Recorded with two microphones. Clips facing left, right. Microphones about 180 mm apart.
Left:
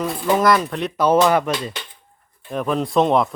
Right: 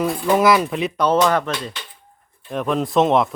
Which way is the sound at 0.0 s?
5° right (ahead or behind).